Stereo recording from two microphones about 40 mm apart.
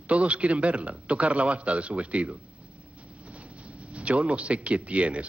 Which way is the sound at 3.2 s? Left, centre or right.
Right.